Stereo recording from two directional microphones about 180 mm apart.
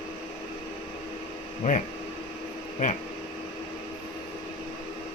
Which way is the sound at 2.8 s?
45° left (ahead or behind).